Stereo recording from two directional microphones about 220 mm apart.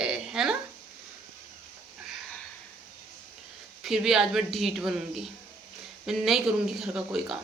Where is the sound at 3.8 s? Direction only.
Centre (ahead or behind).